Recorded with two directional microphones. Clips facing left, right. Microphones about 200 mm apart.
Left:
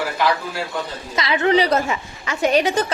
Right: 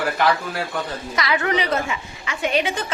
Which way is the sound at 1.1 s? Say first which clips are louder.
Left 5 dB; 25° left (ahead or behind).